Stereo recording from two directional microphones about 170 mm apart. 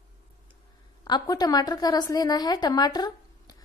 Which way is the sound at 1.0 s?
25° left (ahead or behind).